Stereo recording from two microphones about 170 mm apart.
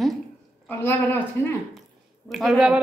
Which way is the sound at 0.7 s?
10° left (ahead or behind).